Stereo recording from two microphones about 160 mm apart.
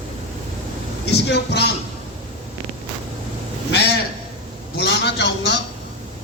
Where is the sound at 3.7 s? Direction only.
90° left.